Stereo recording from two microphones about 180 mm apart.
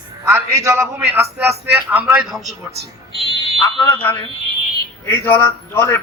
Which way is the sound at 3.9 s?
10° left (ahead or behind).